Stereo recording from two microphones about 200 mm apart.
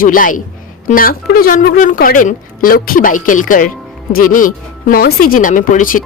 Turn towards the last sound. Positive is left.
turn(degrees=40)  # may be behind; listen again after turning